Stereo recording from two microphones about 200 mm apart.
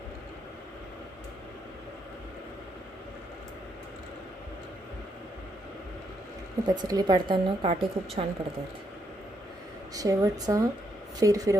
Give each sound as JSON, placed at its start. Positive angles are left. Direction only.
{"t": 6.7, "sound": "a woman's voice", "side_deg": -20}
{"t": 9.9, "sound": "speech", "side_deg": -15}